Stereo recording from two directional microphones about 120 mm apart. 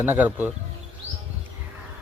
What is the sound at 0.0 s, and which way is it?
Speech, 15° right (ahead or behind).